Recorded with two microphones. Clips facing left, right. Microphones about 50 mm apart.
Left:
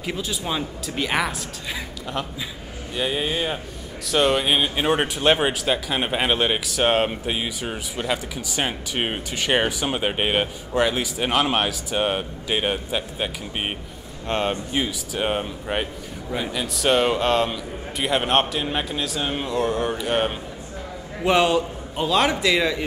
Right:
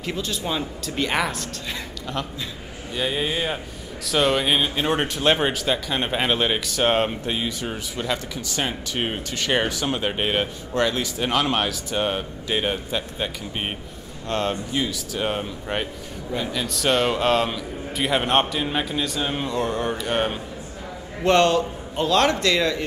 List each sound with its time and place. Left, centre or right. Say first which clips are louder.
0.0 s a man's voice: even; centre